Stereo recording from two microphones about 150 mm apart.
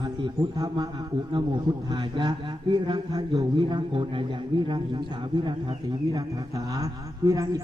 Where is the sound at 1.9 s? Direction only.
30° right (ahead or behind).